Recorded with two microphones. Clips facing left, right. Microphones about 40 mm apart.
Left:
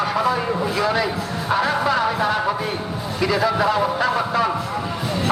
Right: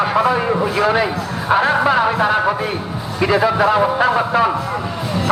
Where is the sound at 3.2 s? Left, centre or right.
Right.